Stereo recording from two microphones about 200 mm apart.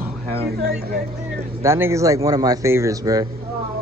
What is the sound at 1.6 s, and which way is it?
Speech, 10° right (ahead or behind).